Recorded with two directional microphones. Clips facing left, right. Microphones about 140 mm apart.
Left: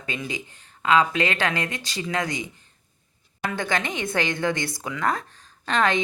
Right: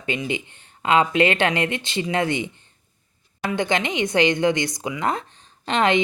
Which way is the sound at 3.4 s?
20° right (ahead or behind).